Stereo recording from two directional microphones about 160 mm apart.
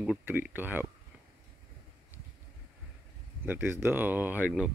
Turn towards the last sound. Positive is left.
turn(degrees=-10)  # may be behind; listen again after turning